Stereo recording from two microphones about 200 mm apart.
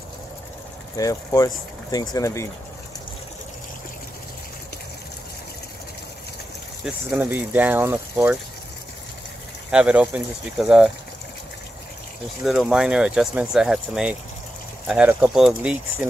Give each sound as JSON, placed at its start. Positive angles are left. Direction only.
{"t": 0.9, "sound": "speech", "side_deg": 15}
{"t": 6.8, "sound": "speech", "side_deg": -10}
{"t": 9.7, "sound": "speech", "side_deg": -5}
{"t": 12.4, "sound": "speech", "side_deg": -5}